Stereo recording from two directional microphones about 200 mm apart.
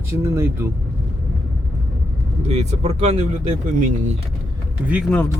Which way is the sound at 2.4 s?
30° right (ahead or behind).